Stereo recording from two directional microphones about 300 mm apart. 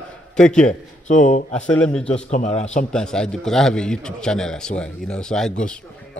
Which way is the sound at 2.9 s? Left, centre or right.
Centre.